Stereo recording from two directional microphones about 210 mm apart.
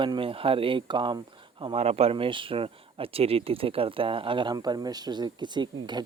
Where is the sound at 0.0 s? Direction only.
25° right (ahead or behind).